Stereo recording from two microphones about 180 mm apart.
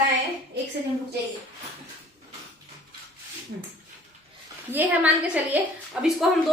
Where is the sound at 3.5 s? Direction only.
85° right.